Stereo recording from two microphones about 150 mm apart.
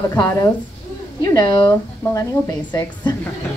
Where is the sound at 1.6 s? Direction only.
15° left (ahead or behind).